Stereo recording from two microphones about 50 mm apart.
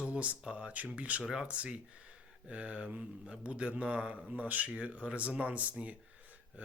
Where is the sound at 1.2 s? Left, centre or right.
Centre.